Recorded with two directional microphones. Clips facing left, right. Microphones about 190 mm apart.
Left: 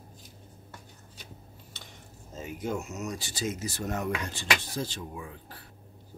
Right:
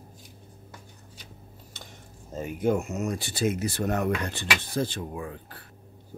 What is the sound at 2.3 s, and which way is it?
Speech, 55° right (ahead or behind).